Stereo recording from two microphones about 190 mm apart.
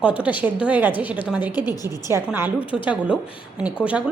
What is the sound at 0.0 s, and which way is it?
A woman's voice, 5° right (ahead or behind).